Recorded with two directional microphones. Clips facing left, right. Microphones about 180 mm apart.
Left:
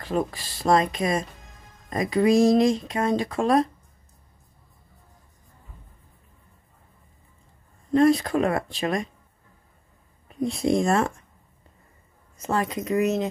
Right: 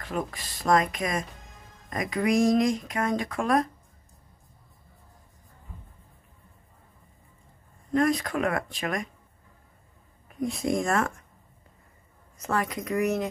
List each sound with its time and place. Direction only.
0.0 s speech: 30° left (ahead or behind)
7.9 s speech: 30° left (ahead or behind)
10.2 s speech: 25° left (ahead or behind)
12.4 s speech: 25° left (ahead or behind)